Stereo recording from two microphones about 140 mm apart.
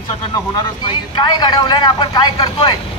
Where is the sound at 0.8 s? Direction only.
35° left (ahead or behind).